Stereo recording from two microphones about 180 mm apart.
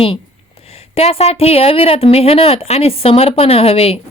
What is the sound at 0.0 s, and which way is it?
A woman's voice, 30° left (ahead or behind).